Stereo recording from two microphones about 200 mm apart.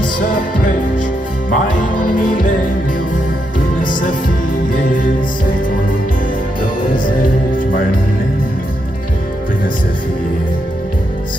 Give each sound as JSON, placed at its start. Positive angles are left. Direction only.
{"t": 1.5, "sound": "music", "side_deg": 40}
{"t": 3.8, "sound": "music", "side_deg": 40}
{"t": 7.1, "sound": "music", "side_deg": 45}